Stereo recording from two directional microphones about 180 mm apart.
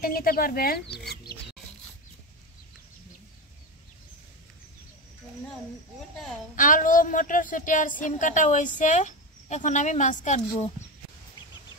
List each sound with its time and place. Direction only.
0.0 s speech: 55° left (ahead or behind)
0.9 s chicken: 60° left (ahead or behind)
6.5 s a woman's voice: 45° left (ahead or behind)